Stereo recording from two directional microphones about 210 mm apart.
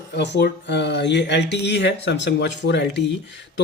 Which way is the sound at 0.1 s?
55° left (ahead or behind).